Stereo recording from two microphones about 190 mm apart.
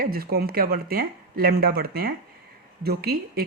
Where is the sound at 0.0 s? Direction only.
50° right (ahead or behind).